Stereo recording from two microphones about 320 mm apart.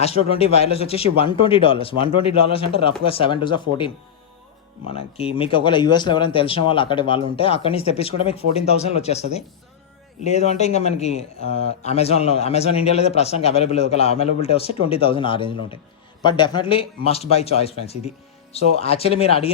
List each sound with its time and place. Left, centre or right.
0.0 s a man's voice: centre
11.4 s speech: right
11.8 s a man's voice: centre